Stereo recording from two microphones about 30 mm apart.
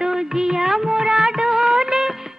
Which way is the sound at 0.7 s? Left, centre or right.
Centre.